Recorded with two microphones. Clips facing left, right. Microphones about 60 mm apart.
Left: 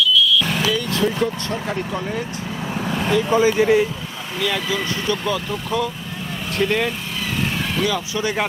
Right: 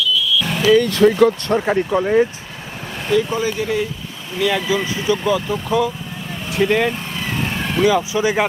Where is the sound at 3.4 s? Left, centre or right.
Left.